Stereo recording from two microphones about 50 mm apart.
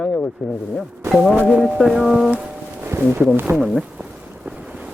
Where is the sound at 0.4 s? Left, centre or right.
Centre.